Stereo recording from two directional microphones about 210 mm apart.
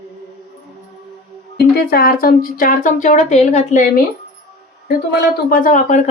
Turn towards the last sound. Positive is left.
turn(degrees=40)  # may be behind; listen again after turning